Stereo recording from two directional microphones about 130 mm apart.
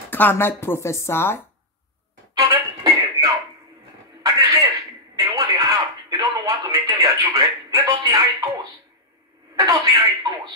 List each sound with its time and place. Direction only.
0.1 s speech: 15° left (ahead or behind)
2.3 s music: 25° right (ahead or behind)
4.2 s a sound: 25° right (ahead or behind)
5.1 s music: 30° right (ahead or behind)
9.7 s speech: 25° right (ahead or behind)